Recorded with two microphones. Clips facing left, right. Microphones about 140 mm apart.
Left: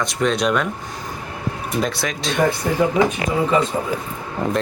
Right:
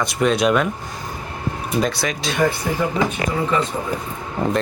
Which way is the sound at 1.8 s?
Centre (ahead or behind).